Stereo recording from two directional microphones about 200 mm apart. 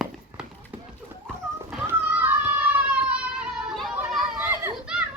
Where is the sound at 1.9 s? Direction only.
10° right (ahead or behind).